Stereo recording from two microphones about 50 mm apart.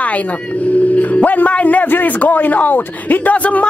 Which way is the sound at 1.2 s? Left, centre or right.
Left.